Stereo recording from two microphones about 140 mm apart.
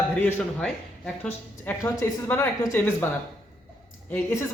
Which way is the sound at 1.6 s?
20° left (ahead or behind).